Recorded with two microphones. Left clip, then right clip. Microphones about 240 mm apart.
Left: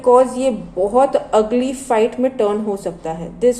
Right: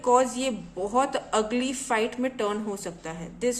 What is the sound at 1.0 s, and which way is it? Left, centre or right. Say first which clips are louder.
A woman's voice: left 11 dB; right.